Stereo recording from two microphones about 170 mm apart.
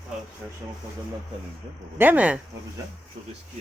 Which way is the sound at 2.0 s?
10° right (ahead or behind).